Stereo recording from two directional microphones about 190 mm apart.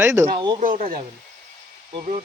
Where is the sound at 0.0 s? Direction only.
10° right (ahead or behind).